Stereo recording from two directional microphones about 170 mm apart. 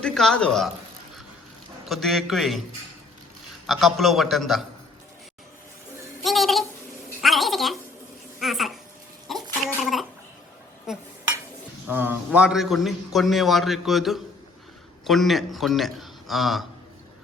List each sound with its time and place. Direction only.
0.0 s a man's voice: 5° left (ahead or behind)
1.9 s a man's voice: centre (ahead or behind)
3.7 s a man's voice: centre (ahead or behind)
6.2 s a sound: centre (ahead or behind)
9.8 s gargling: centre (ahead or behind)
10.9 s dishes: centre (ahead or behind)
11.9 s a man's voice: 10° right (ahead or behind)